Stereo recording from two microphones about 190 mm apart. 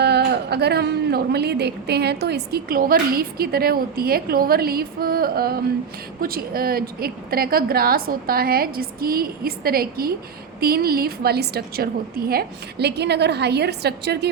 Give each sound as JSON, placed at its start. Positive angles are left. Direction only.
{"t": 0.0, "sound": "a woman's voice", "side_deg": -60}